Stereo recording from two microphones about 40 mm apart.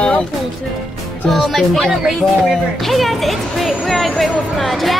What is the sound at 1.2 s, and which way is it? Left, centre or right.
A woman's voice, centre.